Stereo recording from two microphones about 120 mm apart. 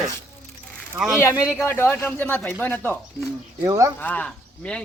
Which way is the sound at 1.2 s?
20° left (ahead or behind).